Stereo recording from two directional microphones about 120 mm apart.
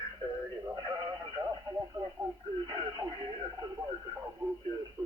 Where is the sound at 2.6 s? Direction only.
35° right (ahead or behind).